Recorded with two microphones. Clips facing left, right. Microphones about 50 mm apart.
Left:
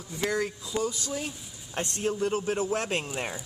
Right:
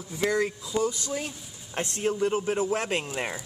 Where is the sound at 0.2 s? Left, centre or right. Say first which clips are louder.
Right 3 dB; centre.